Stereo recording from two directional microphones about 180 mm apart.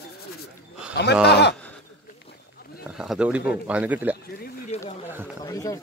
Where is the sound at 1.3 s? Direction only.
65° left (ahead or behind).